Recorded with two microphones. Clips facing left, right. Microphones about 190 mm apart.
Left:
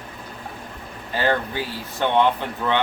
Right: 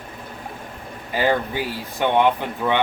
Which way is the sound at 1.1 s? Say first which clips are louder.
Right 2 dB; 15° right (ahead or behind).